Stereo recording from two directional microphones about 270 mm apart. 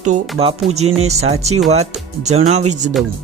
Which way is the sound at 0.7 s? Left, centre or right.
Right.